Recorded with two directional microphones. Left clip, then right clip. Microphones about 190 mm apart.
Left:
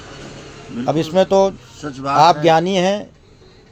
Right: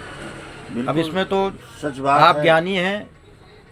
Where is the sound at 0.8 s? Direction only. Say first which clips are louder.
Left 6 dB; 40° left (ahead or behind).